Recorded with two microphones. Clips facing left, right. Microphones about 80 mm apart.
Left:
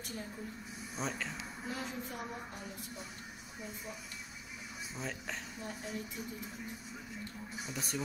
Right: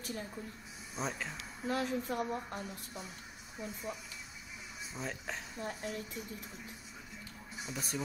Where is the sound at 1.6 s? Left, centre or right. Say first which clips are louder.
Right 8 dB; right.